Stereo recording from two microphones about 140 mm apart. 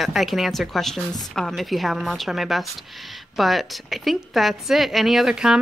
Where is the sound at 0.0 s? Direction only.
Centre (ahead or behind).